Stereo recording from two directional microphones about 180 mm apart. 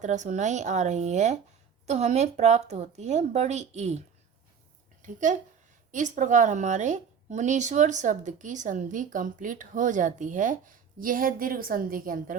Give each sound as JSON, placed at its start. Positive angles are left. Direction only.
{"t": 0.0, "sound": "speech", "side_deg": -40}
{"t": 5.0, "sound": "a woman's voice", "side_deg": -45}